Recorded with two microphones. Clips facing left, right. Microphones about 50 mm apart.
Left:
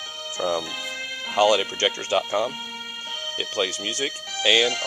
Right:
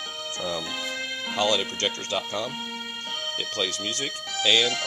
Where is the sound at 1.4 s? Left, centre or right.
Left.